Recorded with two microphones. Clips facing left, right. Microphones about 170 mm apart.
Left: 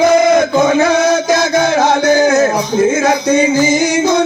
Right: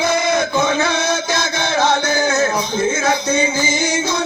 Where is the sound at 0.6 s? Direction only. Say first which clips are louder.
Left 7 dB; 40° left (ahead or behind).